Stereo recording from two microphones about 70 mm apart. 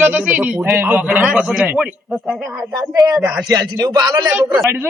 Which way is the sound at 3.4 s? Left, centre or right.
Right.